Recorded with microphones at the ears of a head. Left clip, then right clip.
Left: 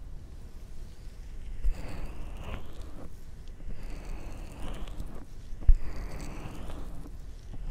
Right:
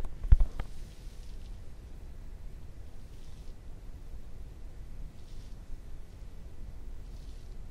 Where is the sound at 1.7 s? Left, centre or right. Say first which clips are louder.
Left 12 dB; left.